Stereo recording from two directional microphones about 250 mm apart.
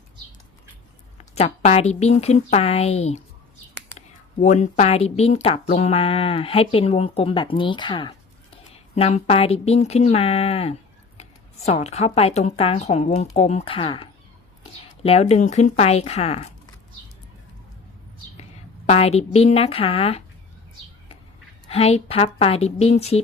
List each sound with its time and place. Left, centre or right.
1.2 s speech: left
18.9 s speech: left
21.7 s speech: left